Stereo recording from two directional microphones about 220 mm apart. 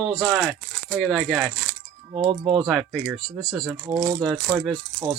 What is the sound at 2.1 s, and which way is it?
Speech, 20° right (ahead or behind).